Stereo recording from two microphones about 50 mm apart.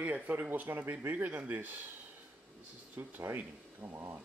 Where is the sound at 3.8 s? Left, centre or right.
Right.